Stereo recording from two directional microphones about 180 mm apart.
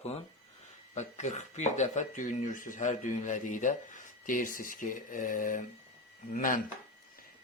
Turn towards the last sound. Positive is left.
turn(degrees=50)  # may be behind; listen again after turning